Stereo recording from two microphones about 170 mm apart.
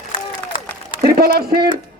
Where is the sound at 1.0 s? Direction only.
65° right (ahead or behind).